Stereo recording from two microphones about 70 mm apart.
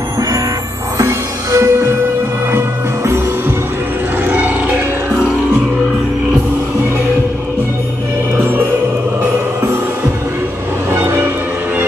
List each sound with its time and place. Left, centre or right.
0.9 s music: right
4.3 s music: right
8.4 s music: right
10.9 s music: right